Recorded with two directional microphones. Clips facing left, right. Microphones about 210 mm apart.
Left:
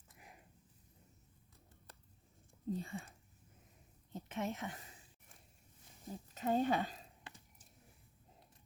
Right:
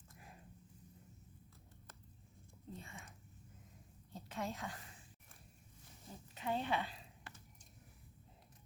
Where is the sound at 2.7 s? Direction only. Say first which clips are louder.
Left 11 dB; 35° left (ahead or behind).